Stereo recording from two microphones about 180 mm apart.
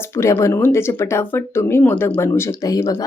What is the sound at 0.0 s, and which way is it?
Speech, 15° left (ahead or behind).